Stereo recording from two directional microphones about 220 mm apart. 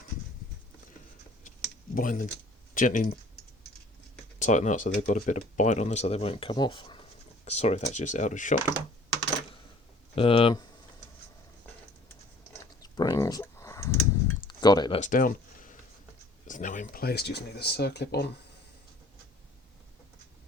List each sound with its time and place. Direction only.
2.0 s speech: 35° left (ahead or behind)
4.4 s speech: 35° left (ahead or behind)
10.2 s speech: 25° left (ahead or behind)
12.8 s clicking: 15° left (ahead or behind)
14.4 s a sound: 20° left (ahead or behind)
15.0 s speech: 35° left (ahead or behind)